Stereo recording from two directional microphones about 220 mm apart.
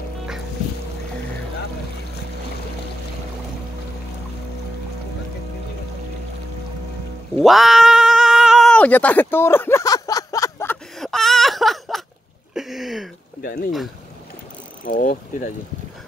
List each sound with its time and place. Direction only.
7.3 s cat: centre (ahead or behind)
12.5 s speech: centre (ahead or behind)
13.4 s mechanisms: 40° left (ahead or behind)
14.9 s mechanisms: 35° left (ahead or behind)